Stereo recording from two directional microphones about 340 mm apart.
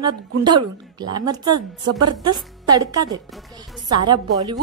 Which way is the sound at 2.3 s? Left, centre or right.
Centre.